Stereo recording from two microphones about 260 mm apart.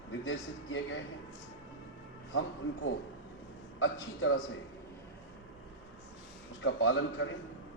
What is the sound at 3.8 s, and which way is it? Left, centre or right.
Speech, left.